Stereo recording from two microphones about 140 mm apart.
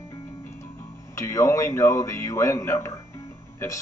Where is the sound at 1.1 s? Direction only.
20° left (ahead or behind).